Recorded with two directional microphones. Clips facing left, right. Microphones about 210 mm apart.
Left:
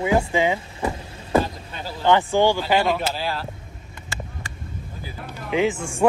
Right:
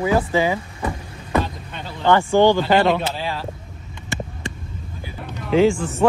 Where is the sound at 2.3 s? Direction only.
10° left (ahead or behind).